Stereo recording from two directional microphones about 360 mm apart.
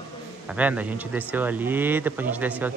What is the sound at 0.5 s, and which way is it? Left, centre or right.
Speech, centre.